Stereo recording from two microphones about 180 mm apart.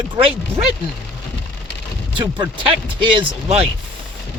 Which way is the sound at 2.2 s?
25° right (ahead or behind).